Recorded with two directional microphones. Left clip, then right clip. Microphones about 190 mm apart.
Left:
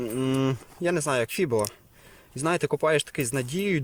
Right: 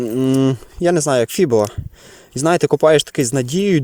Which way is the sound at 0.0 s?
25° right (ahead or behind).